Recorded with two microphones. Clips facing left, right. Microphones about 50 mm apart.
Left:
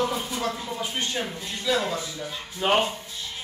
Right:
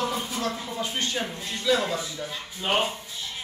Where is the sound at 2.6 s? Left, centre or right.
Left.